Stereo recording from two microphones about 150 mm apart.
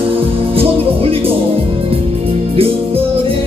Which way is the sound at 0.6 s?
40° right (ahead or behind).